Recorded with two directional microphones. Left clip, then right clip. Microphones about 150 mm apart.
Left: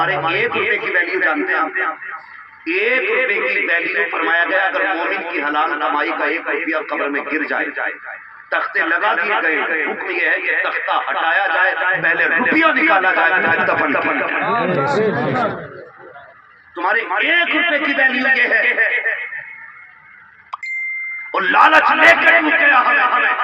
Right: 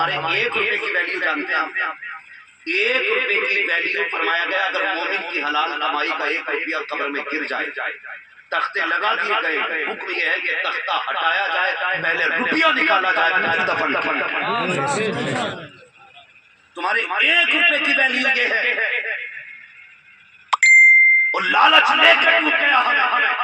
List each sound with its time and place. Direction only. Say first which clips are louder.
0.0 s a man's voice: left 3 dB; 45° right (ahead or behind)
14.7 s speech: left 4 dB; 10° right (ahead or behind)
16.8 s a man's voice: left 2 dB; 45° right (ahead or behind)
21.3 s a man's voice: left 3 dB; 45° right (ahead or behind)